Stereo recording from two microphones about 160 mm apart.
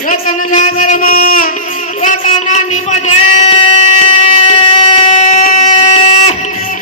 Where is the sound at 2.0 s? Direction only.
55° left (ahead or behind).